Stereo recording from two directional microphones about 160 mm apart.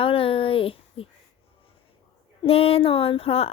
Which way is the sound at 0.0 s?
35° left (ahead or behind).